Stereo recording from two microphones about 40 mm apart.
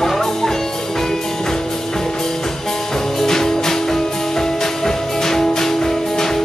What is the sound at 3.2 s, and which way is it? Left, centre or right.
Music, centre.